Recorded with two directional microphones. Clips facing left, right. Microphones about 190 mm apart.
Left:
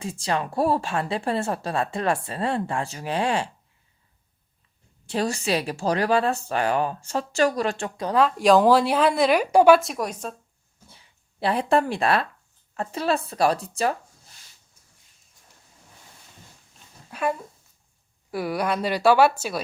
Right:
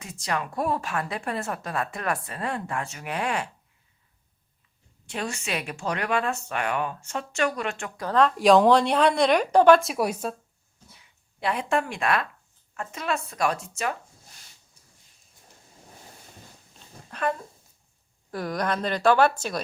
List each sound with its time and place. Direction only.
0.0 s a woman's voice: 30° left (ahead or behind)
5.0 s speech: 35° left (ahead or behind)
8.1 s a woman's voice: centre (ahead or behind)
9.9 s speech: 10° right (ahead or behind)
10.8 s a sound: 30° left (ahead or behind)
12.7 s speech: 35° left (ahead or behind)
17.1 s dog: 10° left (ahead or behind)
18.3 s a woman's voice: 10° left (ahead or behind)